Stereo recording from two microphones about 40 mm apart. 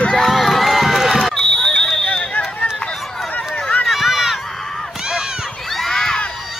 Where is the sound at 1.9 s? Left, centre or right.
Left.